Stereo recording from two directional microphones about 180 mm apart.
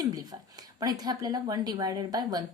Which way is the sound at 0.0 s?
20° right (ahead or behind).